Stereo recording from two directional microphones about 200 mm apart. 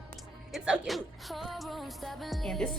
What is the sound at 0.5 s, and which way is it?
Speech, centre (ahead or behind).